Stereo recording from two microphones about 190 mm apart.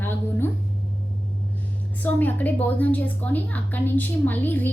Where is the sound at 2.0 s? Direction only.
10° left (ahead or behind).